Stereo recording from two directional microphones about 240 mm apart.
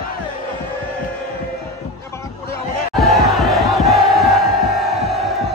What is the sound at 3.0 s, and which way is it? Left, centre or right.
Crowd, centre.